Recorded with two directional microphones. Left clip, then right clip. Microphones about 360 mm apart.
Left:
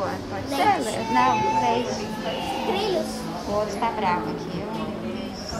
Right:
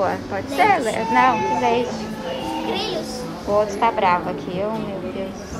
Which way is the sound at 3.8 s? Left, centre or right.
Centre.